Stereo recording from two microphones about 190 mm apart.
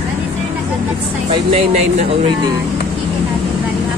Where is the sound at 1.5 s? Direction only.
35° right (ahead or behind).